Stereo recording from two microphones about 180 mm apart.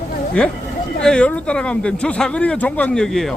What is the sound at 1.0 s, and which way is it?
Speech, 5° left (ahead or behind).